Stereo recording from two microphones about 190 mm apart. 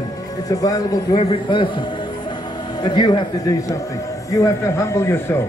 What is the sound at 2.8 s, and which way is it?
Speech, 25° left (ahead or behind).